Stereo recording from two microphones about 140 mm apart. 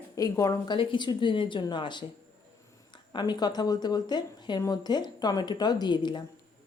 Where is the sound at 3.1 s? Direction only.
30° left (ahead or behind).